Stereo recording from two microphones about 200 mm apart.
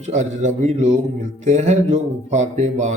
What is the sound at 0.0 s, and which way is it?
Speech, 35° right (ahead or behind).